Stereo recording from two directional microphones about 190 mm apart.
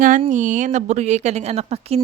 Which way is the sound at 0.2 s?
40° right (ahead or behind).